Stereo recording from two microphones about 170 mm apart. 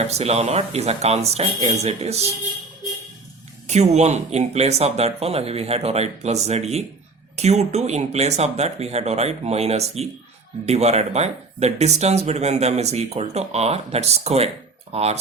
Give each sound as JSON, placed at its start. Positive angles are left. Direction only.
{"t": 0.1, "sound": "speech", "side_deg": -40}
{"t": 3.7, "sound": "speech", "side_deg": -40}